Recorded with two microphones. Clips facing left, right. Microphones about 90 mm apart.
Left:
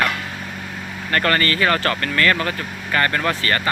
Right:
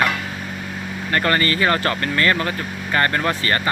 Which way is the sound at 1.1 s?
20° right (ahead or behind).